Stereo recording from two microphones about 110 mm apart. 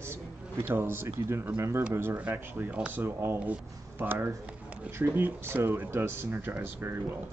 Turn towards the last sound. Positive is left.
turn(degrees=-20)  # may be behind; listen again after turning